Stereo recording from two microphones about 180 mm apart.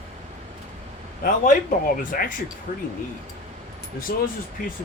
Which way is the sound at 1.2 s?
50° left (ahead or behind).